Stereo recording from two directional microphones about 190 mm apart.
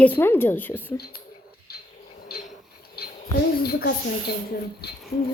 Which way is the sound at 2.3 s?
55° left (ahead or behind).